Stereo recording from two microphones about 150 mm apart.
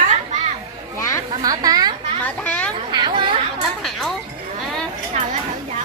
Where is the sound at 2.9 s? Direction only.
30° right (ahead or behind).